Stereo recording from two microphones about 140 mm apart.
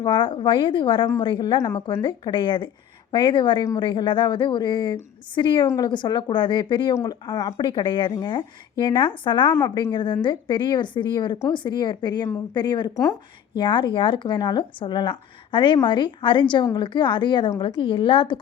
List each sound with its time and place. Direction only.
0.0 s speech: 35° left (ahead or behind)
9.6 s speech: 25° left (ahead or behind)